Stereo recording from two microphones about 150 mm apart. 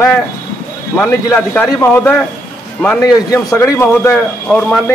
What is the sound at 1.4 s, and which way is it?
Speech, 10° left (ahead or behind).